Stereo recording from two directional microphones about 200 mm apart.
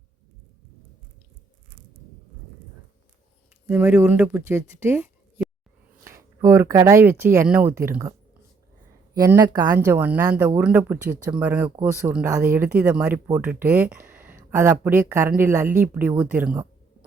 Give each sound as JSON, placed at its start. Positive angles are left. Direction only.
{"t": 3.7, "sound": "speech", "side_deg": -10}
{"t": 9.1, "sound": "speech", "side_deg": -15}